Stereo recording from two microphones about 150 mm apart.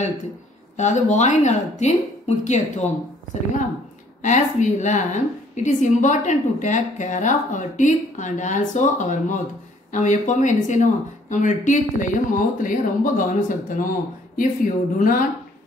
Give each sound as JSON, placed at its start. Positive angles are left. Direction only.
{"t": 0.7, "sound": "speech", "side_deg": 50}
{"t": 4.2, "sound": "a woman's voice", "side_deg": 55}